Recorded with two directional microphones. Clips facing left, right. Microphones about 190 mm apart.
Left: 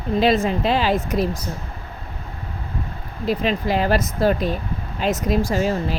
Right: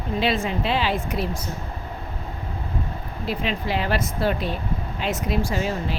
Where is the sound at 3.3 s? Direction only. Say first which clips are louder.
Left 5 dB; 40° left (ahead or behind).